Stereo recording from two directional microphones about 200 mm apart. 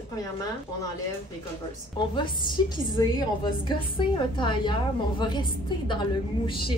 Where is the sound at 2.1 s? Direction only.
25° left (ahead or behind).